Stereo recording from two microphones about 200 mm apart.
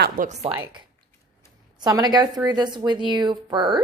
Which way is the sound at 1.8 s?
20° right (ahead or behind).